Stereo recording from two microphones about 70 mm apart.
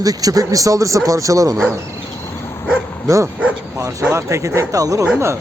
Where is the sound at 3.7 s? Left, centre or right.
Right.